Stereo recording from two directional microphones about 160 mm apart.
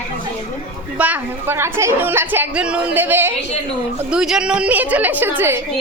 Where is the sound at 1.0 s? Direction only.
10° right (ahead or behind).